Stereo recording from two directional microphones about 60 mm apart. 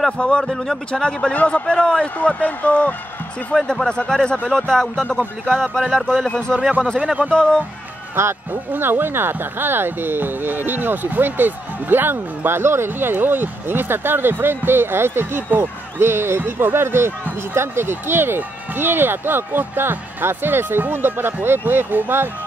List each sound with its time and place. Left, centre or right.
0.2 s a man's voice: centre
3.6 s a man's voice: centre
8.2 s speech: right